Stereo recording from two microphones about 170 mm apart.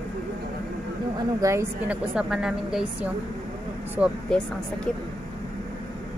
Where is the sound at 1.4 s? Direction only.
15° right (ahead or behind).